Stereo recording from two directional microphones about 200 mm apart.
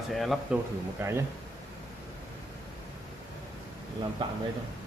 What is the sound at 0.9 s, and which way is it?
Speech, 15° right (ahead or behind).